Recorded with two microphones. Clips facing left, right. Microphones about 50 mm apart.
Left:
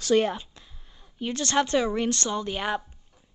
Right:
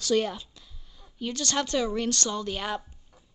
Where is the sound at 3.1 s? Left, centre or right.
Centre.